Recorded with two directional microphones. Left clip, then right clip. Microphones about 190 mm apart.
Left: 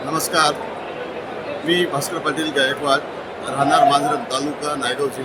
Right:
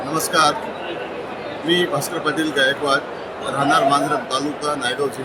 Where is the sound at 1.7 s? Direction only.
10° left (ahead or behind).